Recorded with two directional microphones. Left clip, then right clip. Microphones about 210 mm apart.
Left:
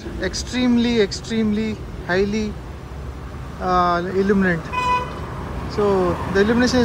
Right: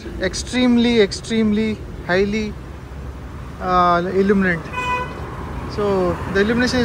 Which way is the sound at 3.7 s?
10° left (ahead or behind).